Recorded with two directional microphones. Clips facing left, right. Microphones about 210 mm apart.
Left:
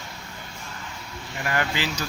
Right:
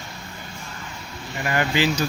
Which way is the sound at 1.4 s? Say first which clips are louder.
Right 5 dB; 10° right (ahead or behind).